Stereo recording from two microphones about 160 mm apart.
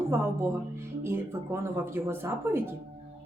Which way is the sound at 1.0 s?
15° right (ahead or behind).